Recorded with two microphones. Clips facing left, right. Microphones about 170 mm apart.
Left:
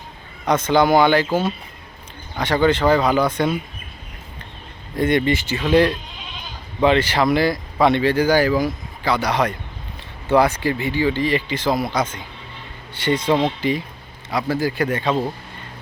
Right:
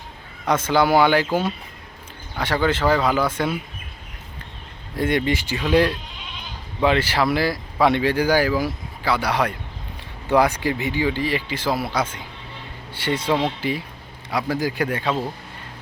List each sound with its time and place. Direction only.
0.4 s speech: 5° right (ahead or behind)
4.9 s speech: 10° right (ahead or behind)